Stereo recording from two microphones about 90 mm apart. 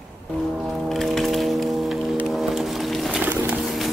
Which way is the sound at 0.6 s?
5° left (ahead or behind).